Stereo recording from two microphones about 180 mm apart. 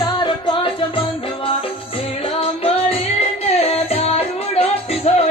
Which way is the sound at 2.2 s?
30° left (ahead or behind).